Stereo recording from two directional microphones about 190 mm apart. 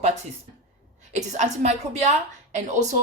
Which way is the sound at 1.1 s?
40° right (ahead or behind).